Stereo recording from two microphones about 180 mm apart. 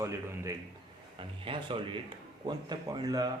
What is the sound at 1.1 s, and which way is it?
Speech, 30° right (ahead or behind).